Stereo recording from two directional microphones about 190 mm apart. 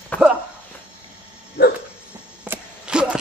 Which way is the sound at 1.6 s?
55° left (ahead or behind).